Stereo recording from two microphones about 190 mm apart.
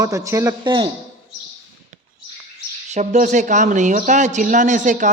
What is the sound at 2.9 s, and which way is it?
Speech, 40° right (ahead or behind).